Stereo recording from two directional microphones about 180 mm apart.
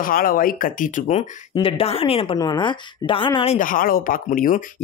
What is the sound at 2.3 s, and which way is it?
Speech, 20° left (ahead or behind).